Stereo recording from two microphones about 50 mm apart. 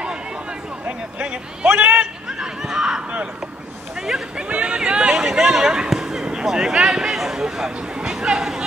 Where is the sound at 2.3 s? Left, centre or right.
Centre.